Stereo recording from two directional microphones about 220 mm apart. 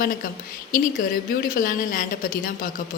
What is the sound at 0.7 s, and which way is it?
A woman's voice, 40° left (ahead or behind).